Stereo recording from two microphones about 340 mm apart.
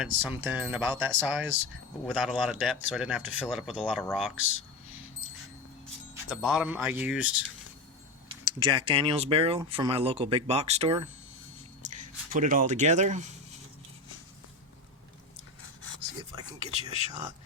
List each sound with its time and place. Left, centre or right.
0.0 s speech: centre
4.4 s speech: left
6.3 s speech: centre
8.5 s speech: centre
15.6 s a sound: left
16.3 s speech: centre